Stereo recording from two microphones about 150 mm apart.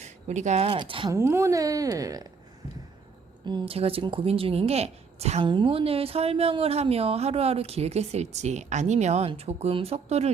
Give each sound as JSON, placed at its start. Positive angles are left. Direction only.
{"t": 0.0, "sound": "a sound", "side_deg": -50}
{"t": 0.7, "sound": "speech", "side_deg": -35}
{"t": 1.1, "sound": "a woman's voice", "side_deg": -15}
{"t": 3.4, "sound": "speech", "side_deg": -30}
{"t": 5.5, "sound": "speech", "side_deg": -35}